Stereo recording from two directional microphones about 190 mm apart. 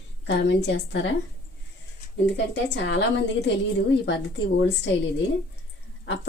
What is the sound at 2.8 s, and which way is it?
A woman's voice, 70° left (ahead or behind).